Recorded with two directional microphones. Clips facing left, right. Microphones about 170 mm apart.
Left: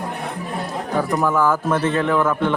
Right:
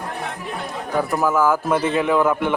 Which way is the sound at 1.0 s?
5° right (ahead or behind).